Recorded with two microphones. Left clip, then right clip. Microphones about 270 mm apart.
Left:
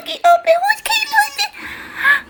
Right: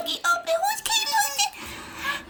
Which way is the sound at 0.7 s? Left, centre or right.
Right.